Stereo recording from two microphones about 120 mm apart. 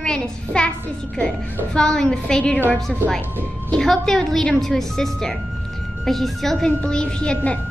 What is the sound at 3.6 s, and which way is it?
A woman's voice, 5° left (ahead or behind).